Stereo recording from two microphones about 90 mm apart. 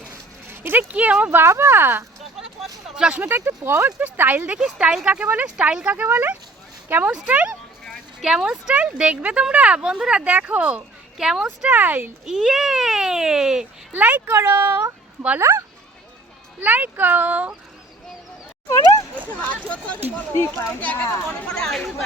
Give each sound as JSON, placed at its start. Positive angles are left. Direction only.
{"t": 0.5, "sound": "speech", "side_deg": -25}
{"t": 2.9, "sound": "speech", "side_deg": -15}
{"t": 3.2, "sound": "speech", "side_deg": -25}
{"t": 4.0, "sound": "speech", "side_deg": -20}
{"t": 7.1, "sound": "speech", "side_deg": -10}
{"t": 12.2, "sound": "speech", "side_deg": -5}
{"t": 13.9, "sound": "speech", "side_deg": -20}
{"t": 16.6, "sound": "speech", "side_deg": -20}
{"t": 19.6, "sound": "speech", "side_deg": 15}
{"t": 20.3, "sound": "speech", "side_deg": 30}
{"t": 20.8, "sound": "speech", "side_deg": 20}